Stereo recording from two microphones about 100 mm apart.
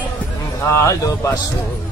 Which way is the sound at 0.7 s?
30° left (ahead or behind).